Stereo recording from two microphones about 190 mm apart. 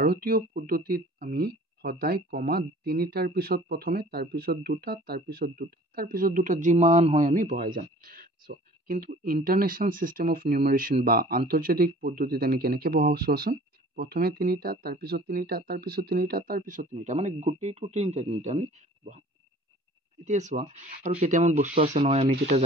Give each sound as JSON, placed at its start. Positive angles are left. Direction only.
{"t": 0.0, "sound": "speech", "side_deg": -50}
{"t": 20.2, "sound": "speech", "side_deg": -40}